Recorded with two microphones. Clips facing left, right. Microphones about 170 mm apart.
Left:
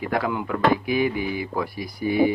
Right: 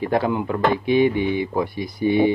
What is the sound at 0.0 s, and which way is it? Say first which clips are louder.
Speech: right 4 dB; 25° right (ahead or behind).